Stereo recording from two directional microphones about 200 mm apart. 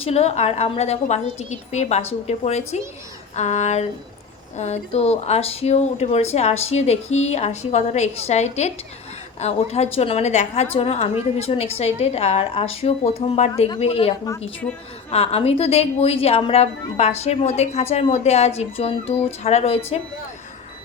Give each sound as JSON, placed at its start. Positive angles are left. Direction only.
{"t": 0.0, "sound": "a woman's voice", "side_deg": 30}
{"t": 14.3, "sound": "a woman's voice", "side_deg": 5}
{"t": 15.1, "sound": "a woman's voice", "side_deg": 30}